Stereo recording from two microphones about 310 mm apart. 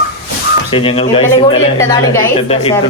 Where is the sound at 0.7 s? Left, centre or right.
Centre.